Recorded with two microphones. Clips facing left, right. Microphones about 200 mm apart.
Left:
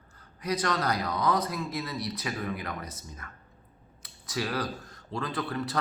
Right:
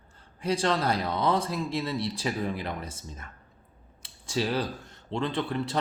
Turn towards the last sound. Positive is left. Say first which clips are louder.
# right 2 dB
turn(degrees=-25)  # may be behind; listen again after turning